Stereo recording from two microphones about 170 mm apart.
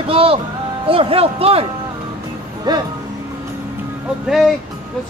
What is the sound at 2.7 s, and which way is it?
Speech, 25° right (ahead or behind).